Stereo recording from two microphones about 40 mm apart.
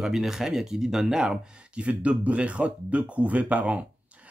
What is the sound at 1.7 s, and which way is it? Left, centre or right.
Speech, right.